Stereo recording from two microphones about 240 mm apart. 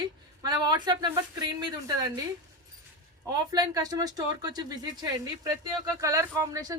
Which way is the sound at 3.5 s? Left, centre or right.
Centre.